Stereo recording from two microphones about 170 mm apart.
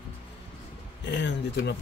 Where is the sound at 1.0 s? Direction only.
90° left.